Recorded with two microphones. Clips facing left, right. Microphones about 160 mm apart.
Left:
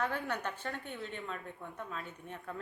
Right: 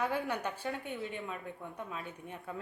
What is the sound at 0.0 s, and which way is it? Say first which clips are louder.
A woman's voice: right 2 dB; 10° right (ahead or behind).